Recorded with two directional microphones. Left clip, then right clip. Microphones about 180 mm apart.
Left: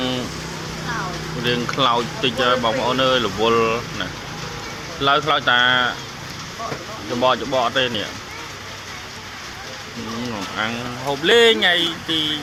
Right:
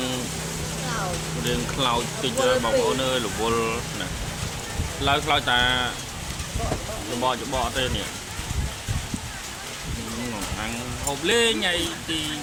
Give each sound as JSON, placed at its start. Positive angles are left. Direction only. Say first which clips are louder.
{"t": 1.5, "sound": "speech", "louder": "left 6 dB", "side_deg": 25}
{"t": 5.0, "sound": "speech", "louder": "left 5 dB", "side_deg": 10}
{"t": 7.2, "sound": "speech", "louder": "left 7 dB", "side_deg": 15}
{"t": 11.3, "sound": "speech", "louder": "left 8 dB", "side_deg": 35}